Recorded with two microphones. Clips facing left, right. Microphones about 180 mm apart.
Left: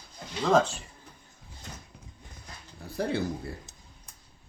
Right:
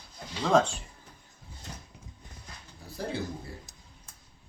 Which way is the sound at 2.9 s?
65° left (ahead or behind).